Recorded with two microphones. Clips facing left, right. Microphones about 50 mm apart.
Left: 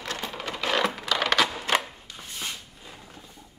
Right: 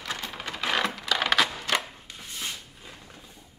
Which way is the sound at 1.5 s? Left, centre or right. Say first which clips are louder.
Left 2 dB; centre.